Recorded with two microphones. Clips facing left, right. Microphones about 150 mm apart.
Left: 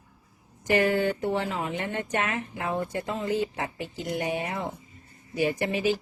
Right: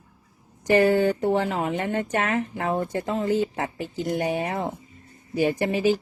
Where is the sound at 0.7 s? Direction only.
35° right (ahead or behind).